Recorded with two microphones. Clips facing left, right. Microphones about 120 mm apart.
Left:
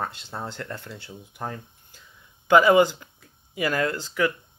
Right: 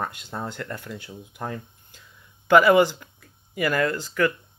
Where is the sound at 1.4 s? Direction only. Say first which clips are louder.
Right 1 dB; 5° left (ahead or behind).